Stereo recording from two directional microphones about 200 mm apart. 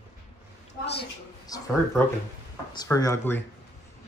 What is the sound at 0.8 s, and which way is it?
Speech, 55° left (ahead or behind).